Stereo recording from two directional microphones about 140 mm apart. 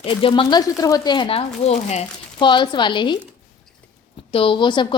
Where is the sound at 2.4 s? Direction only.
35° left (ahead or behind).